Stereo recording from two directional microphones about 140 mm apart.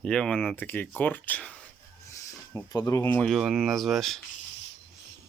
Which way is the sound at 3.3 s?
Centre (ahead or behind).